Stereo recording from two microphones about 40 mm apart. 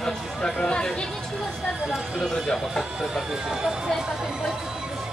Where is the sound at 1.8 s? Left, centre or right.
Centre.